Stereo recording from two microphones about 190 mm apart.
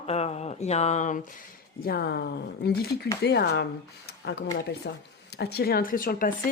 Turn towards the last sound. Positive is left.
turn(degrees=45)  # may be behind; listen again after turning